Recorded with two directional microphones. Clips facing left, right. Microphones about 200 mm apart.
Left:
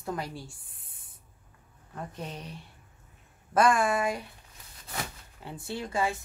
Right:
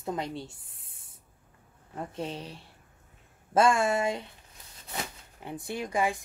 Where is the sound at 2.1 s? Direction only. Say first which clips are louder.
Right 4 dB; 30° right (ahead or behind).